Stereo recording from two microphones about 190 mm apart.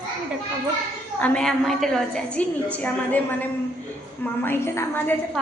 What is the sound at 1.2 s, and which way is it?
A woman's voice, 5° left (ahead or behind).